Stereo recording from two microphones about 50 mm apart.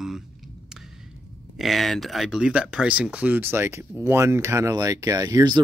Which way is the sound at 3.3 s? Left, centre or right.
Right.